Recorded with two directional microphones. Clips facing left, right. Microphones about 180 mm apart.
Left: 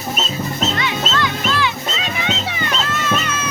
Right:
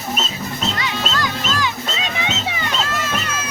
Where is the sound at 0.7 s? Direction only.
40° right (ahead or behind).